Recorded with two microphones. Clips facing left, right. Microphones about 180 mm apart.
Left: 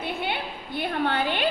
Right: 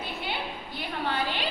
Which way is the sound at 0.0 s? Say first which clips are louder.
Left 4 dB; 60° left (ahead or behind).